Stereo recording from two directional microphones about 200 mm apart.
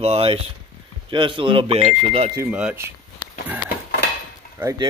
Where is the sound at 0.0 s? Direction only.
30° right (ahead or behind).